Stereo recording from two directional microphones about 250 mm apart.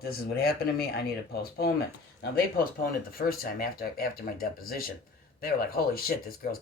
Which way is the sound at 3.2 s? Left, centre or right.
Left.